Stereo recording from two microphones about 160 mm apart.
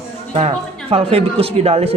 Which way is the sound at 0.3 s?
40° right (ahead or behind).